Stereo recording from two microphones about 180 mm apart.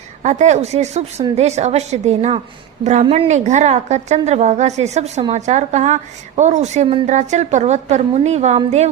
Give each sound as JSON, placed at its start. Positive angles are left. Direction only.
{"t": 0.2, "sound": "a woman's voice", "side_deg": -40}